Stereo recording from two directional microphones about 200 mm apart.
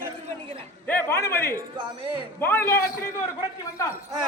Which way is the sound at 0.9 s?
10° left (ahead or behind).